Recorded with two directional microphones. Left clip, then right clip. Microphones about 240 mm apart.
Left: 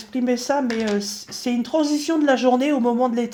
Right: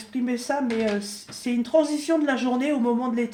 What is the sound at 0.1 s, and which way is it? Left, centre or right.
Speech, left.